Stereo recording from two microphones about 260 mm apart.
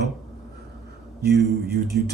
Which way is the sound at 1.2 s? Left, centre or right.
Right.